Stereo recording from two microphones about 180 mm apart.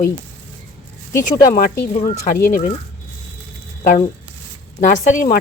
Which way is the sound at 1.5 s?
50° left (ahead or behind).